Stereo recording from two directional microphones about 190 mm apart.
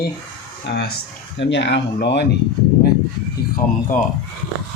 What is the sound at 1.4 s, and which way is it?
Speech, 65° left (ahead or behind).